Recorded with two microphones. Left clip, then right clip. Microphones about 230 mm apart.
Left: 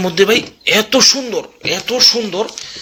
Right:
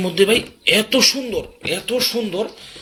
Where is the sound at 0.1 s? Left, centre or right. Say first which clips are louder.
Left 3 dB; centre.